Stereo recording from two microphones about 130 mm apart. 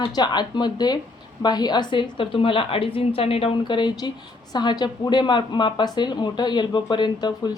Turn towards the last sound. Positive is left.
turn(degrees=35)  # may be behind; listen again after turning